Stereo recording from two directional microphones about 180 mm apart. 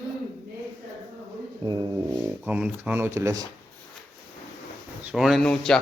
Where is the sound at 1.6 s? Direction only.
25° right (ahead or behind).